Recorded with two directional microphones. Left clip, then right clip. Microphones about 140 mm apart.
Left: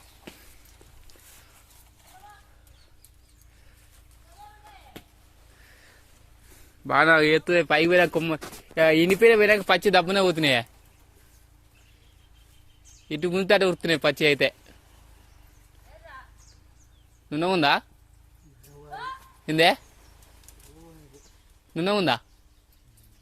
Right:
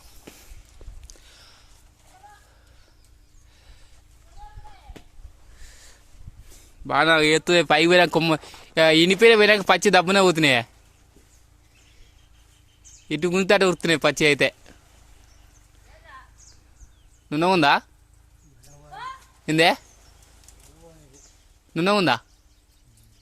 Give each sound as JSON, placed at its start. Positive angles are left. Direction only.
{"t": 1.1, "sound": "a sound", "side_deg": -20}
{"t": 6.6, "sound": "a sound", "side_deg": -15}
{"t": 7.3, "sound": "speech", "side_deg": -40}
{"t": 7.5, "sound": "speech", "side_deg": -60}
{"t": 13.1, "sound": "speech", "side_deg": -55}
{"t": 17.2, "sound": "speech", "side_deg": -55}
{"t": 19.5, "sound": "speech", "side_deg": -50}
{"t": 21.7, "sound": "speech", "side_deg": -55}